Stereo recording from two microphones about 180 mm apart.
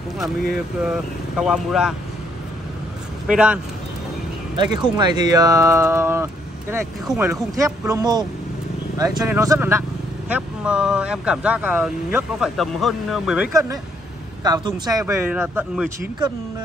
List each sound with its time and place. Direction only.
0.8 s speech: 5° right (ahead or behind)
3.3 s speech: 5° right (ahead or behind)
4.6 s speech: 25° right (ahead or behind); by 13.6 s 5° right (ahead or behind)
14.4 s speech: 20° right (ahead or behind)